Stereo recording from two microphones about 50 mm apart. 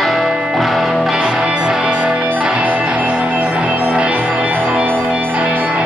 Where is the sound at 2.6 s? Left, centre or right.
Right.